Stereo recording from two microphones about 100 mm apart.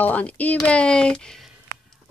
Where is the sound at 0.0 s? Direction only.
15° left (ahead or behind).